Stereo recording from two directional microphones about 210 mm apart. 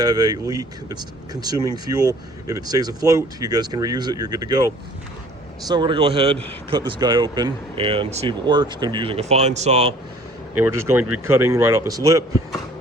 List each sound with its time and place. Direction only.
0.0 s speech: 20° right (ahead or behind)
10.6 s speech: 10° right (ahead or behind)